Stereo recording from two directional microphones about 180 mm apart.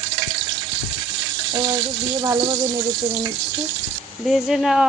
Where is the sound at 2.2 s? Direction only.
20° right (ahead or behind).